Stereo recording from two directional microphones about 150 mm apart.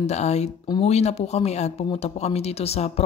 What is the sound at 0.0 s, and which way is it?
Speech, 45° left (ahead or behind).